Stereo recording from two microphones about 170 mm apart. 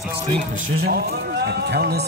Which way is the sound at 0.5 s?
60° right (ahead or behind).